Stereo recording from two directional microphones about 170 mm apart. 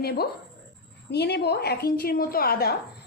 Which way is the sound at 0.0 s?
65° left (ahead or behind).